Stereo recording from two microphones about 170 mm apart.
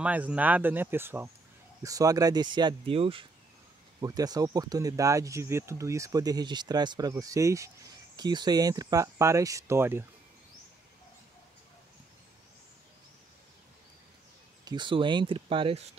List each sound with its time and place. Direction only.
0.0 s speech: 10° right (ahead or behind); by 3.3 s 35° right (ahead or behind)
4.0 s speech: 20° right (ahead or behind)
14.6 s speech: 25° right (ahead or behind)